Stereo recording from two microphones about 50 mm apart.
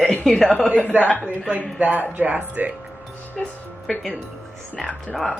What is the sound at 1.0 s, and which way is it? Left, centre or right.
Speech, left.